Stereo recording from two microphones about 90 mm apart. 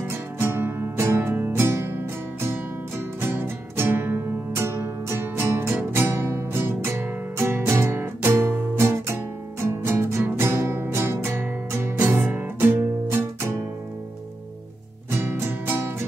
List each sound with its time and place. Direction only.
0.0 s music: 25° right (ahead or behind)
15.0 s music: 25° right (ahead or behind)